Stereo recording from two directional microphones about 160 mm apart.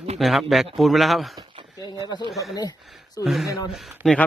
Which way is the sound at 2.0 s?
30° left (ahead or behind).